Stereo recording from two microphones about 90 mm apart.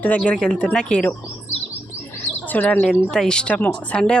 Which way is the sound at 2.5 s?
20° left (ahead or behind).